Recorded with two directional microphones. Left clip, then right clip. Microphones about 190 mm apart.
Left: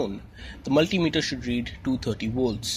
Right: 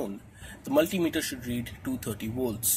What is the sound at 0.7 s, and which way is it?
Speech, 35° left (ahead or behind).